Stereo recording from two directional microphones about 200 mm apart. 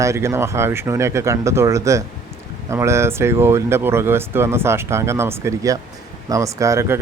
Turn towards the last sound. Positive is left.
turn(degrees=-15)  # may be behind; listen again after turning